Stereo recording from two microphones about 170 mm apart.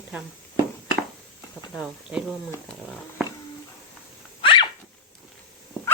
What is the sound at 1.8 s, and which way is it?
Speech, 5° right (ahead or behind).